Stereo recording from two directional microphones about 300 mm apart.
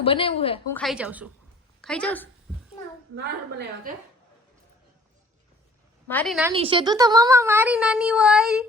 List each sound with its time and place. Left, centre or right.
0.0 s a woman's voice: centre
0.7 s a woman's voice: centre
3.2 s a woman's voice: right
6.1 s a woman's voice: centre
6.5 s speech: centre